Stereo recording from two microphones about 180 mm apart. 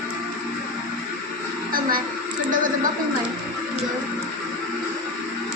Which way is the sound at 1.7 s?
55° right (ahead or behind).